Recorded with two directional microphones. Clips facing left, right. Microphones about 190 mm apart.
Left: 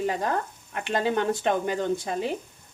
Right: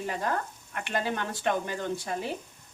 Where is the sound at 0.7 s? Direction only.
25° left (ahead or behind).